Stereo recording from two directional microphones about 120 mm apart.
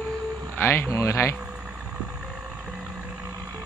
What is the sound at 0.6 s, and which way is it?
Speech, 20° left (ahead or behind).